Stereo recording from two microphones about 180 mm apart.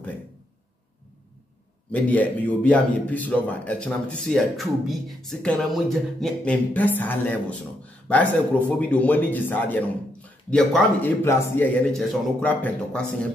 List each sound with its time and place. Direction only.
1.9 s a man's voice: 10° left (ahead or behind)